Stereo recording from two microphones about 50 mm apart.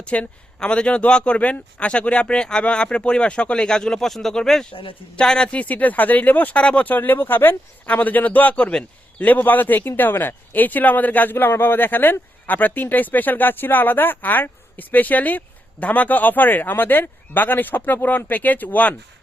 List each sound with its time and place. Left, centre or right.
0.0 s speech: left
6.6 s speech: left
6.8 s a man's voice: left